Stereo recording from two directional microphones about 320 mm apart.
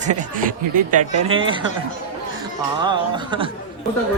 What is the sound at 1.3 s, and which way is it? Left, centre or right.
Speech, centre.